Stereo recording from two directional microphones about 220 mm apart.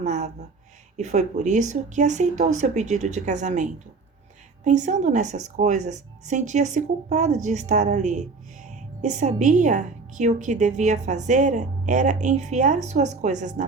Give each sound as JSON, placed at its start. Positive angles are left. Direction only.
{"t": 0.0, "sound": "a woman's voice", "side_deg": -30}